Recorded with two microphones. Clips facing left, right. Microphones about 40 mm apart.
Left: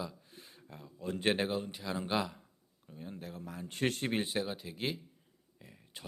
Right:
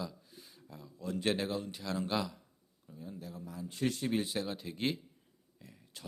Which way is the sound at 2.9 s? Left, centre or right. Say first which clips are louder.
Left 1 dB; left.